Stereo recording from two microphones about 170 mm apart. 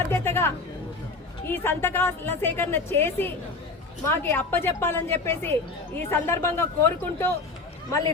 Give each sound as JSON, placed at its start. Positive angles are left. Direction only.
{"t": 0.1, "sound": "a woman's voice", "side_deg": 15}